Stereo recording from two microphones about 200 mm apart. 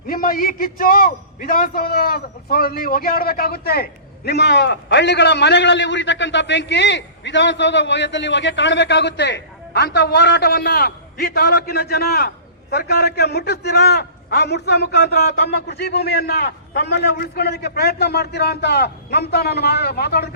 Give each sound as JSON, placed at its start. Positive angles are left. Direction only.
{"t": 0.1, "sound": "a man's voice", "side_deg": 45}